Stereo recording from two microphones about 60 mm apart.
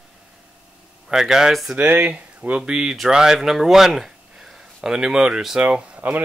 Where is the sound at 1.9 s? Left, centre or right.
Right.